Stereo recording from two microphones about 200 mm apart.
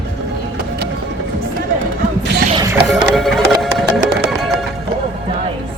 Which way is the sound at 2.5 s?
15° right (ahead or behind).